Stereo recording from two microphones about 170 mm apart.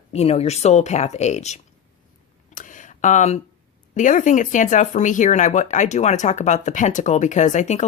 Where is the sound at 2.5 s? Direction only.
50° left (ahead or behind).